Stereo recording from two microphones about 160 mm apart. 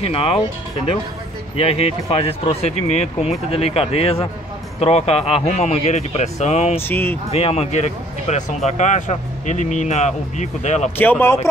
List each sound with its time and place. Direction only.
0.0 s speech: 35° left (ahead or behind)
1.6 s speech: 35° left (ahead or behind)
6.9 s speech: 15° left (ahead or behind)
7.2 s speech: 40° left (ahead or behind)
11.0 s speech: 10° left (ahead or behind)